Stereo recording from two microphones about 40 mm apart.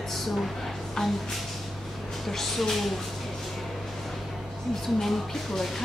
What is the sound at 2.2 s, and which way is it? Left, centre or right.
Speech, centre.